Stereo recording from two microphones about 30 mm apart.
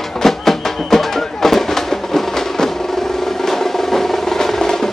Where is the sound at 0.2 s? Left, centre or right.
Centre.